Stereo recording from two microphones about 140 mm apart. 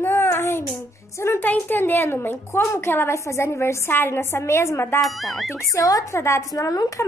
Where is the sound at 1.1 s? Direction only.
15° left (ahead or behind).